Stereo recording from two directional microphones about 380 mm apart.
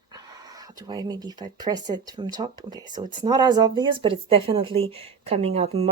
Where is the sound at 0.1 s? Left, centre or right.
Centre.